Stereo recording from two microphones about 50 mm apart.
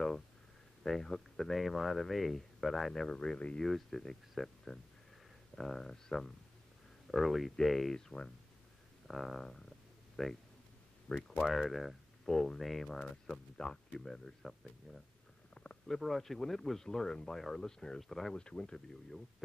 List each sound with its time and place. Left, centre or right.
0.8 s speech: centre
7.1 s speech: centre
9.0 s speech: centre
15.5 s stomach rumble: left
15.9 s speech: centre
18.3 s speech: centre